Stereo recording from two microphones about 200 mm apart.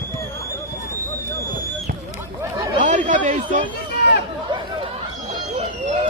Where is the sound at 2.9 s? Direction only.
40° right (ahead or behind).